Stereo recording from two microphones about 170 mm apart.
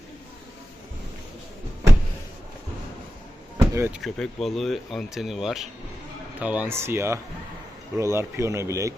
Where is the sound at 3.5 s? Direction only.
15° right (ahead or behind).